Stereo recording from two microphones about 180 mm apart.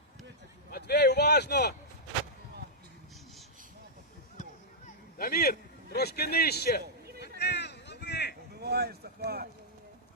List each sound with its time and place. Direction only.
0.7 s speech: 65° left (ahead or behind)
4.9 s speech: 55° left (ahead or behind)
7.2 s a sound: 65° left (ahead or behind)
8.5 s speech: 65° right (ahead or behind)